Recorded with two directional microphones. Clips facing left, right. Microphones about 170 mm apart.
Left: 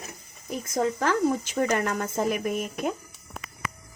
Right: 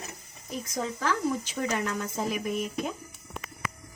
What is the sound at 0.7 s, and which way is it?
Speech, 50° left (ahead or behind).